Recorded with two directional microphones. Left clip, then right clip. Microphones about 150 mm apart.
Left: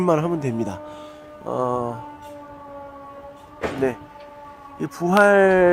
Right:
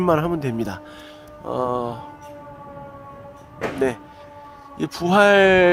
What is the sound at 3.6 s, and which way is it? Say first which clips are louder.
Music: even; 35° left (ahead or behind).